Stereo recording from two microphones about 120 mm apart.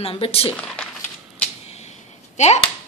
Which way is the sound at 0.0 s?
55° left (ahead or behind).